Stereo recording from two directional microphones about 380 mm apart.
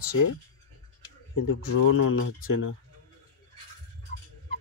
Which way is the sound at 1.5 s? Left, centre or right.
Left.